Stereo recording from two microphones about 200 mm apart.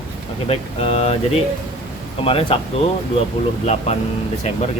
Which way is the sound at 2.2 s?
30° left (ahead or behind).